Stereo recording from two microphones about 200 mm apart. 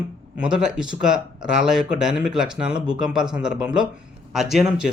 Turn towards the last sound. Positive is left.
turn(degrees=-5)  # may be behind; listen again after turning